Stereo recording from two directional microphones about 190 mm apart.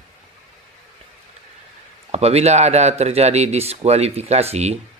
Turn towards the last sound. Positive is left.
turn(degrees=-35)  # may be behind; listen again after turning